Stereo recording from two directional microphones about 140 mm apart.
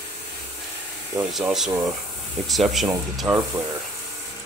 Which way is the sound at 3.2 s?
20° right (ahead or behind).